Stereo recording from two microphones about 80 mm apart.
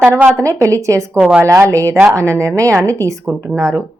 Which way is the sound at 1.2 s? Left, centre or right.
Centre.